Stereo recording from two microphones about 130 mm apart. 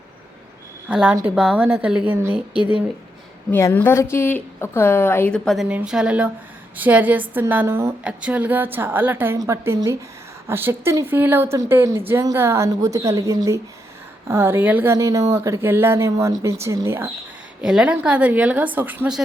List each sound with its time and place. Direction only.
0.9 s a woman's voice: 5° right (ahead or behind)
3.5 s a woman's voice: 15° left (ahead or behind)
5.3 s a woman's voice: 5° left (ahead or behind)
5.6 s a woman's voice: 10° right (ahead or behind)
14.9 s speech: 25° right (ahead or behind)
17.6 s a woman's voice: 5° right (ahead or behind)